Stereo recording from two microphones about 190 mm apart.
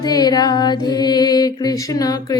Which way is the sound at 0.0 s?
20° left (ahead or behind).